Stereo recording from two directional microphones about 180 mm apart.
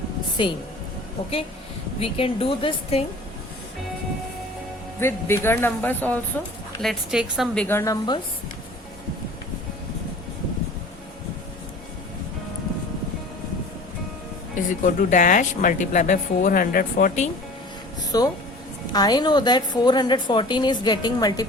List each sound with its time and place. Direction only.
0.4 s a woman's voice: 30° left (ahead or behind)
2.0 s speech: 30° left (ahead or behind)
4.9 s speech: 15° left (ahead or behind)
6.8 s a woman's voice: centre (ahead or behind); by 7.9 s 15° left (ahead or behind)
14.7 s a woman's voice: 45° left (ahead or behind)
18.1 s a woman's voice: 20° left (ahead or behind)